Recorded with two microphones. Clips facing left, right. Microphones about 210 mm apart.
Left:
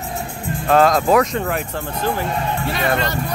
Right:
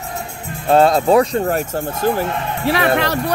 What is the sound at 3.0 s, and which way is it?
Speech, 70° right (ahead or behind).